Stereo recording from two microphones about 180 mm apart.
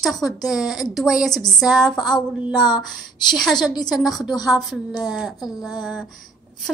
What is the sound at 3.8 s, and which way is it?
A woman's voice, centre (ahead or behind).